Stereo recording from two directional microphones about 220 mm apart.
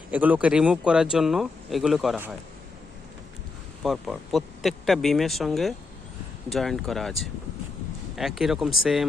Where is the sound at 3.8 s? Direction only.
Centre (ahead or behind).